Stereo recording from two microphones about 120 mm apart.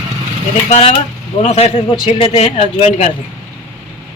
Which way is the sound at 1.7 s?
50° left (ahead or behind).